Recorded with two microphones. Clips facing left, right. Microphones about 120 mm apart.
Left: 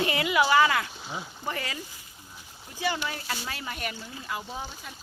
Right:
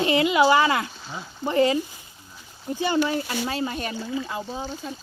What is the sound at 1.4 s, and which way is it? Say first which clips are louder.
Speech: right 16 dB; 25° right (ahead or behind).